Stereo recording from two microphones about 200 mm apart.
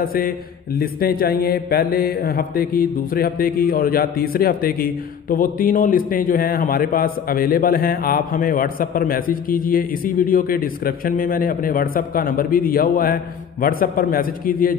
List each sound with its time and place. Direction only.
0.0 s mantra: 45° left (ahead or behind)